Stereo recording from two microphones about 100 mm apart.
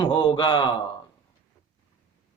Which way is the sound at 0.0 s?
60° left (ahead or behind).